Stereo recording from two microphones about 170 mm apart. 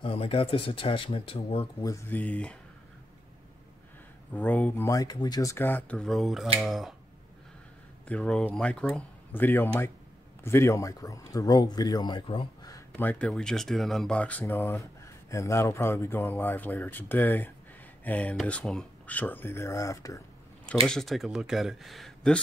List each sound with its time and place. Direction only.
0.0 s speech: 35° left (ahead or behind)
1.9 s speech: 10° left (ahead or behind)
4.3 s speech: 10° left (ahead or behind)
8.1 s speech: 5° left (ahead or behind); by 12.8 s 25° left (ahead or behind)
13.0 s speech: 10° left (ahead or behind)
20.8 s speech: centre (ahead or behind)